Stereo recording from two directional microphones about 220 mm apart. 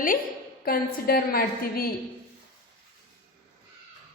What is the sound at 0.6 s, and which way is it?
A woman's voice, 40° left (ahead or behind).